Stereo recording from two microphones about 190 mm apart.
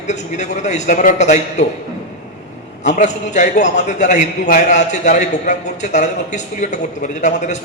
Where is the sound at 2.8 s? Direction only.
40° left (ahead or behind).